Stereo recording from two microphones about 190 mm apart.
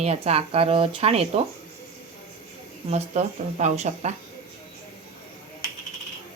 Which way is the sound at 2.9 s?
35° right (ahead or behind).